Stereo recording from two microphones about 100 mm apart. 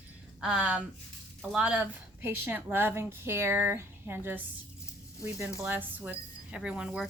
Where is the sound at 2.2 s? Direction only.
20° right (ahead or behind).